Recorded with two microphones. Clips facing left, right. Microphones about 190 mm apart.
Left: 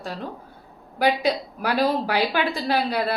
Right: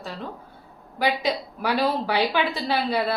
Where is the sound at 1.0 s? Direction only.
10° left (ahead or behind).